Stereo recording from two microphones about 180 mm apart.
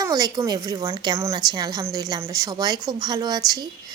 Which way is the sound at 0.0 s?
20° right (ahead or behind).